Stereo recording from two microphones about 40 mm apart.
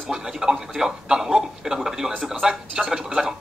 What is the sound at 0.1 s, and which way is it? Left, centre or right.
A man's voice, centre.